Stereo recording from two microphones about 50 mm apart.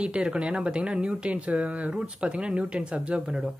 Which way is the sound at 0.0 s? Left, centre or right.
Right.